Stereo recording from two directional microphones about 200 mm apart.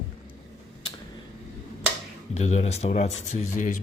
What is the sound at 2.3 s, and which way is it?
Speech, 35° left (ahead or behind).